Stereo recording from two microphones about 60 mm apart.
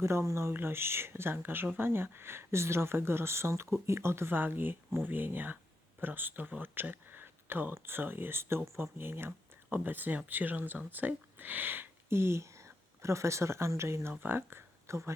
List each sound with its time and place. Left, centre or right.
0.0 s speech: right
14.1 s speech: right
14.8 s speech: right